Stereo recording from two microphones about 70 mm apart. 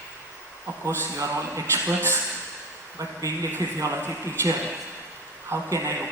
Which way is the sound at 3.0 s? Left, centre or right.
Right.